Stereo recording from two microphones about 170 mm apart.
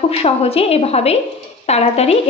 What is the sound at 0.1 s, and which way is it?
A woman's voice, 35° left (ahead or behind).